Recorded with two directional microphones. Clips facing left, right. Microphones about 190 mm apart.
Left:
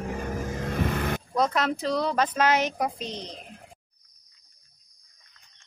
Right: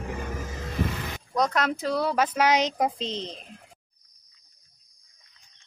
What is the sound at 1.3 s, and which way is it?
Speech, centre (ahead or behind).